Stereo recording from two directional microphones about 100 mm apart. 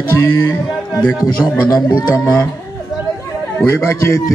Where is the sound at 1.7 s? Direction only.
45° left (ahead or behind).